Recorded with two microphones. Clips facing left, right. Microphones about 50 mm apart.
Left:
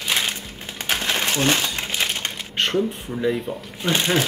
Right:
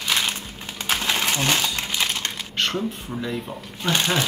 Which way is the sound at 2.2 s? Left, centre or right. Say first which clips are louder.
Left 1 dB; left.